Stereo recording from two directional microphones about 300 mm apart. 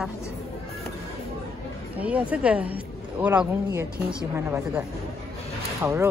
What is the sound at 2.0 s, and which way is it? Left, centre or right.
Speech, centre.